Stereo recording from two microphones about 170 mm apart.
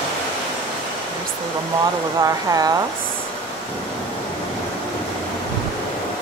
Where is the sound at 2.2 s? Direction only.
20° right (ahead or behind).